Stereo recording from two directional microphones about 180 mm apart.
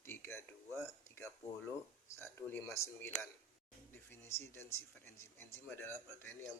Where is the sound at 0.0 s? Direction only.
15° left (ahead or behind).